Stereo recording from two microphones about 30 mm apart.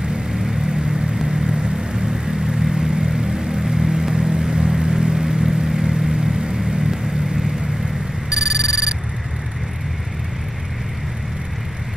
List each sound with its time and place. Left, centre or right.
0.7 s vehicle: right
8.3 s telephone bell ringing: centre